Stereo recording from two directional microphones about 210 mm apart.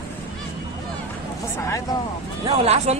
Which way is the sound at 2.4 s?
30° right (ahead or behind).